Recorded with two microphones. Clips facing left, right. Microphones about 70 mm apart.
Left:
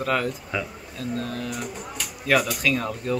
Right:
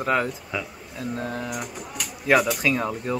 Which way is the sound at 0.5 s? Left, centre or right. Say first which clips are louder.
Left 1 dB; centre.